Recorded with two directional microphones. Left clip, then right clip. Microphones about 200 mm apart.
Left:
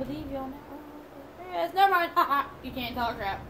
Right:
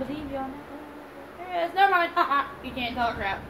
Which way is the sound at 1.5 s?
35° left (ahead or behind).